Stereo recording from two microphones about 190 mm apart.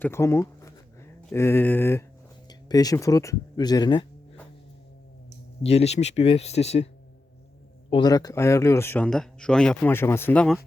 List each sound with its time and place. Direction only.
0.0 s speech: 15° left (ahead or behind)
5.6 s speech: 35° left (ahead or behind)
7.9 s speech: 25° left (ahead or behind); by 10.6 s 5° left (ahead or behind)